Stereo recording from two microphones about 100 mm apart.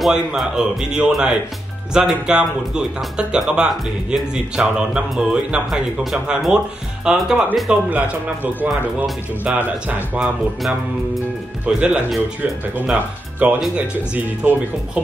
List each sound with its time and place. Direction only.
0.0 s speech: 5° right (ahead or behind)
9.4 s speech: 15° right (ahead or behind)